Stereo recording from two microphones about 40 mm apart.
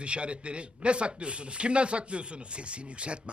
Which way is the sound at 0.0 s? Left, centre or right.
Right.